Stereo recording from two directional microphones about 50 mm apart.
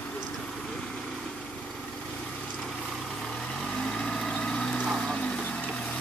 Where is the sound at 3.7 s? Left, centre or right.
Centre.